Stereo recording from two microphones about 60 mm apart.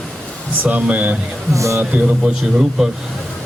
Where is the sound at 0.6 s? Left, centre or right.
Right.